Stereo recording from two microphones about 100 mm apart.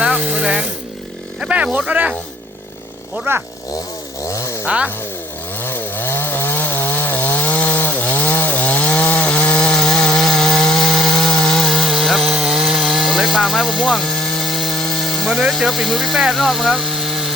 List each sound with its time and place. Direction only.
0.0 s a sound: 15° right (ahead or behind)
1.4 s speech: 10° right (ahead or behind)
3.3 s speech: 25° right (ahead or behind)
4.2 s chainsaw: 30° left (ahead or behind)
4.6 s chainsaw: 10° right (ahead or behind)
5.5 s chainsaw: 20° left (ahead or behind); by 17.3 s 5° right (ahead or behind)